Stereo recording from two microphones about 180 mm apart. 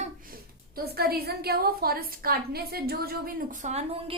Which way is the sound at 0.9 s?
60° right (ahead or behind).